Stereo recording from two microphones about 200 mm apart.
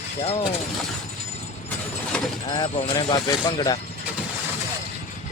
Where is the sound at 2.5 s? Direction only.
20° left (ahead or behind).